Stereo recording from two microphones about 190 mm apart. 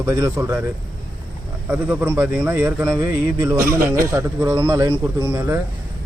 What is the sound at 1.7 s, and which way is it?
Speech, 10° right (ahead or behind).